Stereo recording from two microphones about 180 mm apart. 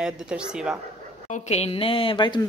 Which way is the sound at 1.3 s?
35° left (ahead or behind).